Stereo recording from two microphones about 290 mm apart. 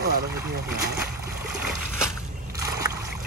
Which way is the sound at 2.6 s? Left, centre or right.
Centre.